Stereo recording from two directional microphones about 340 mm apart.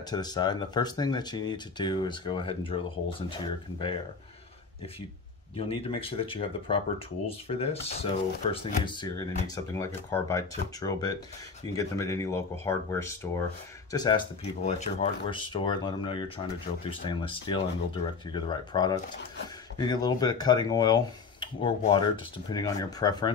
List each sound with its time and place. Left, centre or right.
0.1 s speech: centre
5.6 s speech: centre